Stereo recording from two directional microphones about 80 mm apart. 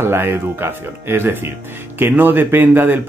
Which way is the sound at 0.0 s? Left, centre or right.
Right.